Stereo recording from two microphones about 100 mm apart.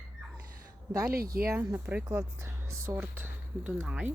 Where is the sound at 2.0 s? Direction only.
30° right (ahead or behind); by 4.1 s 10° right (ahead or behind).